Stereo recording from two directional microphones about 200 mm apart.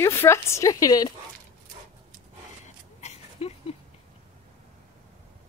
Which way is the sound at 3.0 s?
30° left (ahead or behind).